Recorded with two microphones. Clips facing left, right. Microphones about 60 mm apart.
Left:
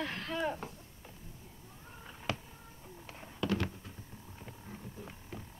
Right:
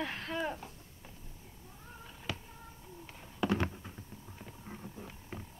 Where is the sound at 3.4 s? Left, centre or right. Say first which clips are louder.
Right 2 dB; right.